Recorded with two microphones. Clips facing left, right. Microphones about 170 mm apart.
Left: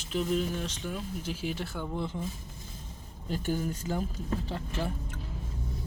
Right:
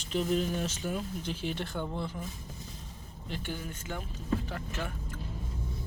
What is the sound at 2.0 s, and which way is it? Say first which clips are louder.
Speech: left 2 dB; 20° left (ahead or behind).